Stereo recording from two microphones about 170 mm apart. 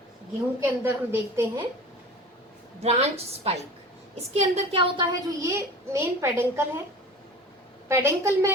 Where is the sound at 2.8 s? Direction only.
40° right (ahead or behind).